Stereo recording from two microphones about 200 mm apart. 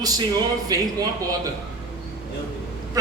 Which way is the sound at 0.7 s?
20° right (ahead or behind).